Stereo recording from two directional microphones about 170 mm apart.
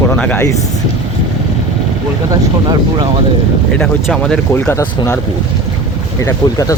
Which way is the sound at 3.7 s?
5° left (ahead or behind).